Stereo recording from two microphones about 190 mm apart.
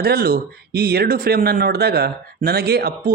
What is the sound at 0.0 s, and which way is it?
Speech, 55° right (ahead or behind).